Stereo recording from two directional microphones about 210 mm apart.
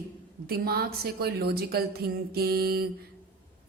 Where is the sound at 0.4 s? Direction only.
45° right (ahead or behind).